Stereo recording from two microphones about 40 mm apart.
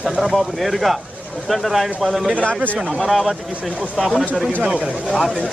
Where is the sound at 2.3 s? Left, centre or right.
Left.